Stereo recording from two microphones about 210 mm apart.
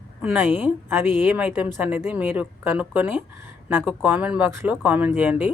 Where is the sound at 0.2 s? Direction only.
10° right (ahead or behind).